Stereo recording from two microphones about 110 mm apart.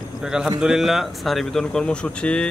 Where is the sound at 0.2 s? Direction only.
5° right (ahead or behind).